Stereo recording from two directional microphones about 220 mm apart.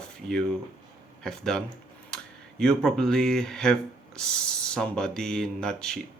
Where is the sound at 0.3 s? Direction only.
Centre (ahead or behind).